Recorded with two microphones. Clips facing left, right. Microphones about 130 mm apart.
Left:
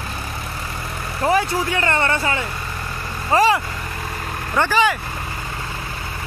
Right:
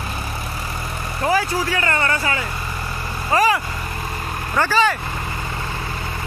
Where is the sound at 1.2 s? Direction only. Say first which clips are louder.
Left 1 dB; 25° left (ahead or behind).